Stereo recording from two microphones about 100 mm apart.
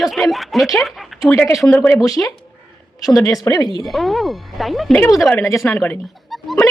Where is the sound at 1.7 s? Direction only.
25° left (ahead or behind).